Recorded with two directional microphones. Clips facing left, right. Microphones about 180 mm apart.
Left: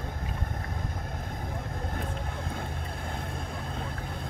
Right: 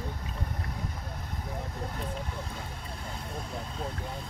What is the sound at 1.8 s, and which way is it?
Vehicle, 50° left (ahead or behind).